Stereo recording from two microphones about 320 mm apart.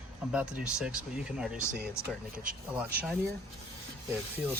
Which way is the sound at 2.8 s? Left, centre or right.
Centre.